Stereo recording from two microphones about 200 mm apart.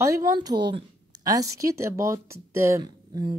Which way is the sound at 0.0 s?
15° right (ahead or behind).